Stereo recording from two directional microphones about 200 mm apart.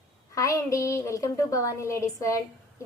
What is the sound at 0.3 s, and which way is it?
A woman's voice, 15° left (ahead or behind).